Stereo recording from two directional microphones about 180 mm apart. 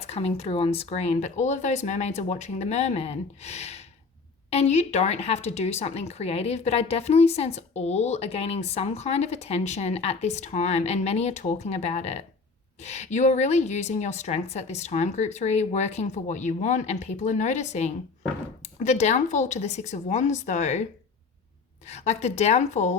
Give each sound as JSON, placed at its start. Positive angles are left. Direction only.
{"t": 0.0, "sound": "speech", "side_deg": 35}
{"t": 21.8, "sound": "speech", "side_deg": 40}